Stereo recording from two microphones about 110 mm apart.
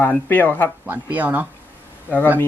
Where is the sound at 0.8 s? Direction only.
15° right (ahead or behind).